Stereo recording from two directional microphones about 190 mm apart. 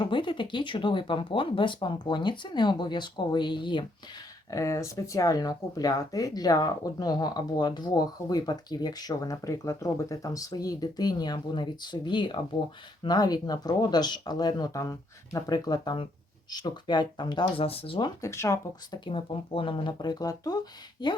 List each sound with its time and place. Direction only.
0.0 s speech: 25° left (ahead or behind)